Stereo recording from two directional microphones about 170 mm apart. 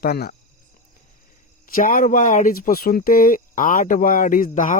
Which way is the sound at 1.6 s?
55° left (ahead or behind).